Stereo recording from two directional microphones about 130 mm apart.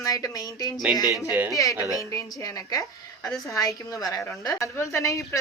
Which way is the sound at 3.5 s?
25° left (ahead or behind).